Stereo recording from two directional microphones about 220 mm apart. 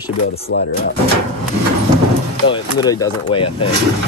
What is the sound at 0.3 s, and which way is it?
Speech, 45° left (ahead or behind).